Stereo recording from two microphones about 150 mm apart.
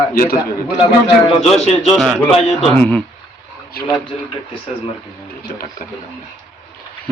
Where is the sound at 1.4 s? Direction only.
Centre (ahead or behind).